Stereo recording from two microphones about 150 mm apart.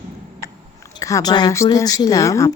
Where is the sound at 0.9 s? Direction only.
25° left (ahead or behind).